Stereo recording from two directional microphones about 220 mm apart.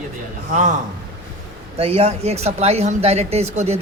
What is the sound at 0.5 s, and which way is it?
Speech, 35° right (ahead or behind).